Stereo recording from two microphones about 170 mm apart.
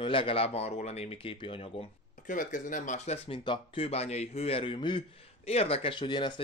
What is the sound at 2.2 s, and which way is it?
Speech, 50° left (ahead or behind).